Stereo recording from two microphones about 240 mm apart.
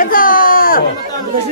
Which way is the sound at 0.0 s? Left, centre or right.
Left.